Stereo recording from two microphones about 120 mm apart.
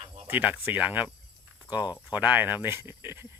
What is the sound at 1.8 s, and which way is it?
Speech, 35° left (ahead or behind).